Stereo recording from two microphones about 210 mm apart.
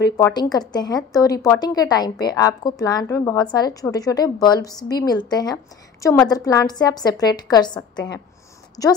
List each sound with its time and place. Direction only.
0.0 s a woman's voice: 20° left (ahead or behind)